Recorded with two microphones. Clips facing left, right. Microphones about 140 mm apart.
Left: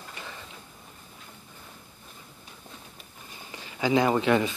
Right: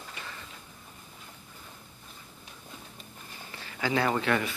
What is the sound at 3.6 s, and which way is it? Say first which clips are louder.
Speech: left 5 dB; 15° left (ahead or behind).